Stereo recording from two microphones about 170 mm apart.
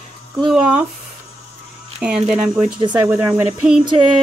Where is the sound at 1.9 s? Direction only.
5° right (ahead or behind).